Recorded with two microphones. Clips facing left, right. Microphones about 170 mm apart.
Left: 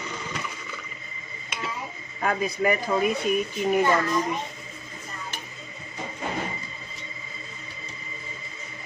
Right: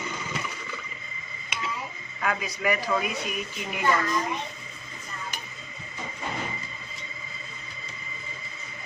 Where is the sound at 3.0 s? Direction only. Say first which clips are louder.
Left 8 dB; 45° left (ahead or behind).